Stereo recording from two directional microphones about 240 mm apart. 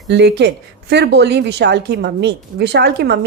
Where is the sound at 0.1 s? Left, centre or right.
Right.